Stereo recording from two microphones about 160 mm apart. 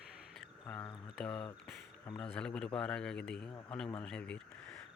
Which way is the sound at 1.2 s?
5° left (ahead or behind).